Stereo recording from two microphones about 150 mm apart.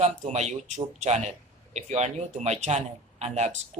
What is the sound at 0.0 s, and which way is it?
Speech, 50° right (ahead or behind).